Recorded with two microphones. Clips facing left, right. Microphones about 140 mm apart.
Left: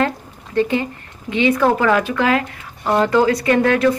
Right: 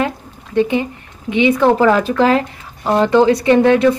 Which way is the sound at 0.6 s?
20° right (ahead or behind).